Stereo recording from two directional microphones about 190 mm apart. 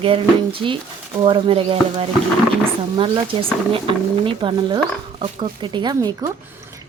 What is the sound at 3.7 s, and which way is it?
Speech, 25° right (ahead or behind).